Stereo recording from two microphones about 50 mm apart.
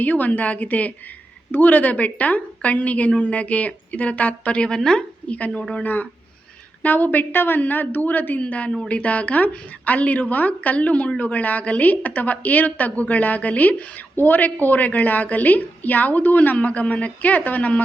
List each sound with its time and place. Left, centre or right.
0.0 s a woman's voice: left; by 5.0 s centre
5.3 s a woman's voice: left
5.8 s a woman's voice: left